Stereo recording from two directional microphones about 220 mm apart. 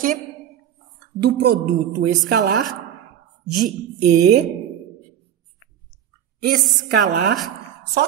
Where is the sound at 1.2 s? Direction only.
45° right (ahead or behind).